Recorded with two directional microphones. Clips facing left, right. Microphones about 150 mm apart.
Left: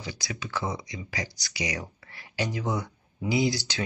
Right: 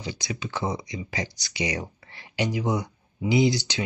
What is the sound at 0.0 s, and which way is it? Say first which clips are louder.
Speech: right 4 dB; 20° right (ahead or behind).